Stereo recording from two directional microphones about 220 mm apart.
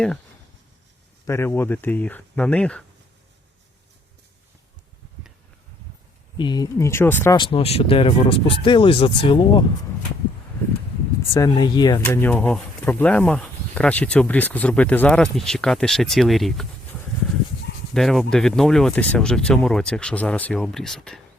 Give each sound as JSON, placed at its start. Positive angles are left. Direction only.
{"t": 1.3, "sound": "speech", "side_deg": 10}
{"t": 6.3, "sound": "speech", "side_deg": 20}
{"t": 7.3, "sound": "speech", "side_deg": 25}
{"t": 11.3, "sound": "speech", "side_deg": 15}
{"t": 17.9, "sound": "speech", "side_deg": 0}